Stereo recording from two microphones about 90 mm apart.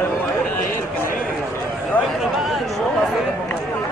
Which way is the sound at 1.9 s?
20° left (ahead or behind).